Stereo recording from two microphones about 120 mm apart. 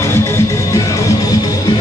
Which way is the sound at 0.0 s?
20° left (ahead or behind).